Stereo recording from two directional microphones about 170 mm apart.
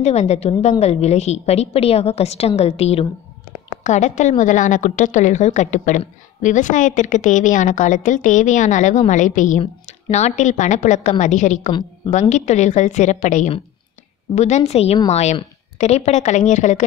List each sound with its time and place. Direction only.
0.0 s a woman's voice: 40° left (ahead or behind)